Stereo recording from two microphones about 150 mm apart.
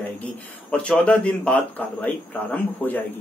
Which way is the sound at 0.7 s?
5° left (ahead or behind).